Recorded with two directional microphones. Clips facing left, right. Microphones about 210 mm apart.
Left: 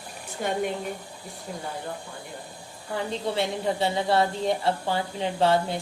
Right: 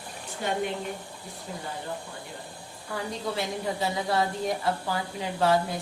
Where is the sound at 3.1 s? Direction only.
25° left (ahead or behind).